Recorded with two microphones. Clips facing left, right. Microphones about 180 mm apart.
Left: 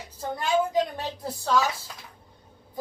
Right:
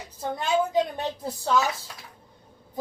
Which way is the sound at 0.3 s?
20° right (ahead or behind).